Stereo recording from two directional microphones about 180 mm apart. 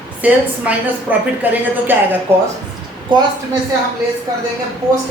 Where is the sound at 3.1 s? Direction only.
25° right (ahead or behind).